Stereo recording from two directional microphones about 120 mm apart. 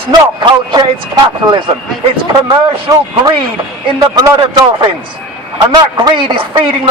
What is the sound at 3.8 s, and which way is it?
Speech, 35° right (ahead or behind).